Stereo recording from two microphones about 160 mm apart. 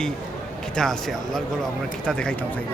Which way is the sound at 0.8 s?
5° left (ahead or behind).